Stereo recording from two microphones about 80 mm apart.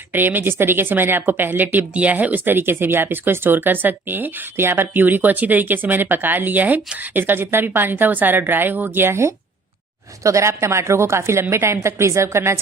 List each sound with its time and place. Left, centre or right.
0.1 s a woman's voice: right